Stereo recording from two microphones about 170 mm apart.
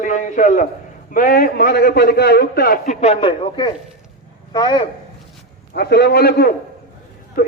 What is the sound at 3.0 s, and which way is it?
Speech, 35° left (ahead or behind).